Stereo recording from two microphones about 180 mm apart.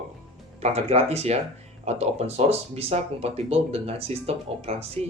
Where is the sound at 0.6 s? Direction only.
35° right (ahead or behind).